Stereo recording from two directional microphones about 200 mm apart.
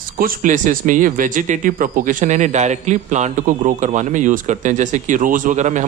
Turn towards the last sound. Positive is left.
turn(degrees=-35)  # may be behind; listen again after turning